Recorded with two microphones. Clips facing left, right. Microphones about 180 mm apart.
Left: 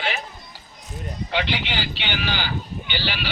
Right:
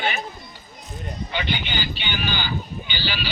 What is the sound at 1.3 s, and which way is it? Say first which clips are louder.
Speech: left 3 dB; 90° left.